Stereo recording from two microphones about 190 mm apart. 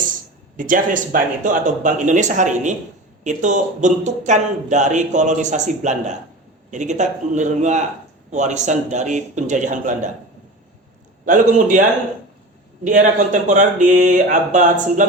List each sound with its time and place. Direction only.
0.5 s speech: 45° right (ahead or behind)
11.3 s speech: 40° right (ahead or behind)
12.8 s speech: 40° right (ahead or behind)